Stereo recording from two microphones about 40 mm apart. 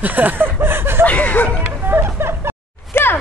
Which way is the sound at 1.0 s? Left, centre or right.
Left.